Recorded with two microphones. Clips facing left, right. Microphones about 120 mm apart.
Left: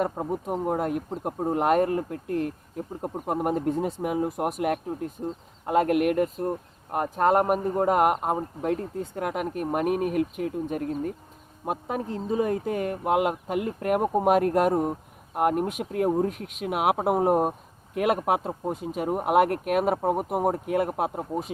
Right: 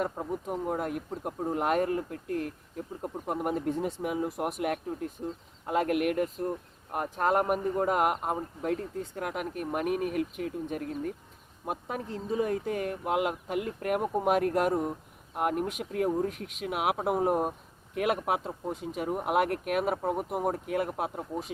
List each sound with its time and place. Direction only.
0.2 s speech: 30° left (ahead or behind)
1.5 s speech: 50° left (ahead or behind)
20.0 s speech: 35° left (ahead or behind)
20.7 s speech: 55° left (ahead or behind)